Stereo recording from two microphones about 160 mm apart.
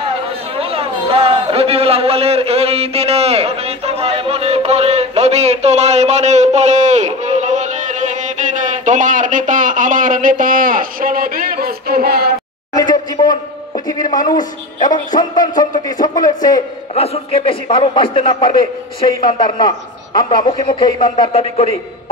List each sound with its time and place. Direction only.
0.1 s a man's voice: 35° right (ahead or behind); by 12.3 s 70° right (ahead or behind)
12.7 s a sound: 25° left (ahead or behind)
14.1 s a man's voice: 25° left (ahead or behind)
16.9 s a man's voice: 40° left (ahead or behind)